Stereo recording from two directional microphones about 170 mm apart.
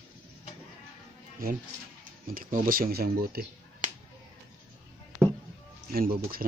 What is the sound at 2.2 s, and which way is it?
Speech, 55° right (ahead or behind).